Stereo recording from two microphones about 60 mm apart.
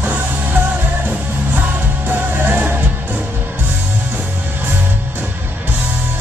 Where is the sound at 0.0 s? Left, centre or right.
Right.